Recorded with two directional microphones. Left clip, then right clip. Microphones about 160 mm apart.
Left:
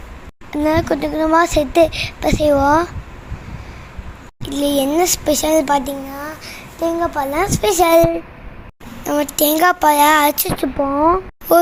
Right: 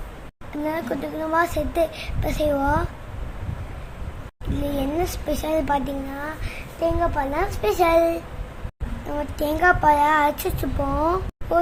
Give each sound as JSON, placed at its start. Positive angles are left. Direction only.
{"t": 0.5, "sound": "a child's voice", "side_deg": 35}
{"t": 4.6, "sound": "a child's voice", "side_deg": 30}
{"t": 9.0, "sound": "a child's voice", "side_deg": 25}
{"t": 10.9, "sound": "speech", "side_deg": 0}
{"t": 11.5, "sound": "speech", "side_deg": 35}